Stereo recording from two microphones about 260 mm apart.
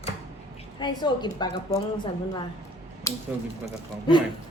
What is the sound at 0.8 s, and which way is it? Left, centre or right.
Speech, centre.